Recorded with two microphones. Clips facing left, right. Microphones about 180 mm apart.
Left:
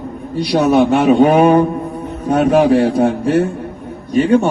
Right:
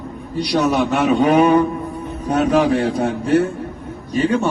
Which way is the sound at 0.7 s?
35° left (ahead or behind).